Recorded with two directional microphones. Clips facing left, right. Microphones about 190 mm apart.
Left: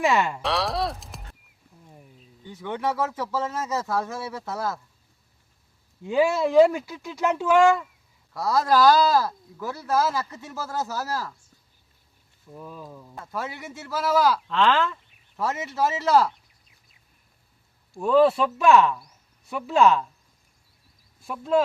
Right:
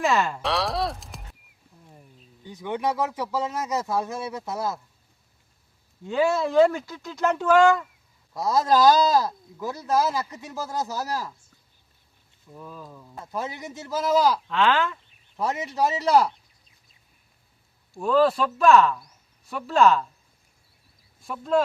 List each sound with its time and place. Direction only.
0.0 s speech: 5° left (ahead or behind)
2.5 s speech: 15° right (ahead or behind)
6.1 s speech: 10° left (ahead or behind)
8.3 s speech: 20° right (ahead or behind)
12.5 s speech: 5° left (ahead or behind)
13.1 s speech: 20° right (ahead or behind)
14.4 s speech: 5° right (ahead or behind)
15.4 s speech: 15° right (ahead or behind)
17.9 s speech: 5° left (ahead or behind)
21.2 s speech: 5° left (ahead or behind)